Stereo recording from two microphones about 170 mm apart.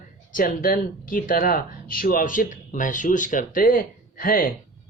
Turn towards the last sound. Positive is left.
turn(degrees=55)  # may be behind; listen again after turning